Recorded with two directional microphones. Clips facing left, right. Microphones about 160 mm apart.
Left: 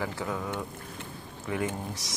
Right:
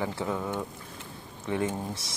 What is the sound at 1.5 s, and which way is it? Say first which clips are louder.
Speech: right 2 dB; 25° right (ahead or behind).